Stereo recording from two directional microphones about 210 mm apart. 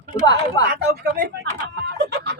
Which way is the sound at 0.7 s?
50° right (ahead or behind).